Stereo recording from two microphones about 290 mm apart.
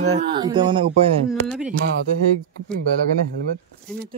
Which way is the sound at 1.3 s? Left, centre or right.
Centre.